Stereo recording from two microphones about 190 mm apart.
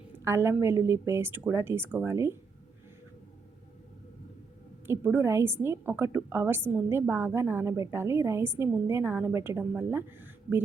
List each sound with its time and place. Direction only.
0.3 s a woman's voice: 10° right (ahead or behind)
4.9 s a woman's voice: 10° right (ahead or behind)